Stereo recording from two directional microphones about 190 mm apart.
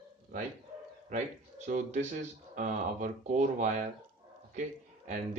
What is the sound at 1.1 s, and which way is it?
Speech, 40° right (ahead or behind).